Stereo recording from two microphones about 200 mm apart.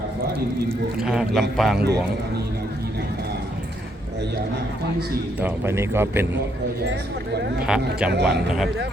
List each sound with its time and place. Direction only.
0.9 s speech: 5° right (ahead or behind)
5.4 s a man's voice: 10° right (ahead or behind)
7.7 s speech: 5° right (ahead or behind)
8.1 s speech: 60° right (ahead or behind)